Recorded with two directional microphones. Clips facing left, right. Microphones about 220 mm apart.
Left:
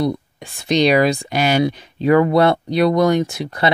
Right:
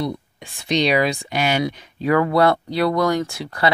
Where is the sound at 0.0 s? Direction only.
45° left (ahead or behind).